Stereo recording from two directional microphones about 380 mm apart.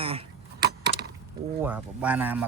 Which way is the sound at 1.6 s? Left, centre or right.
Centre.